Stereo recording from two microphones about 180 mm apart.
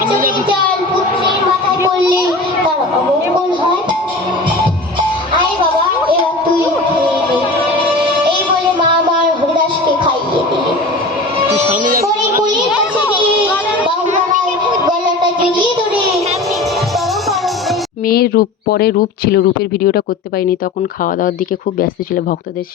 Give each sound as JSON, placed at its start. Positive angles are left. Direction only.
{"t": 18.1, "sound": "speech", "side_deg": 60}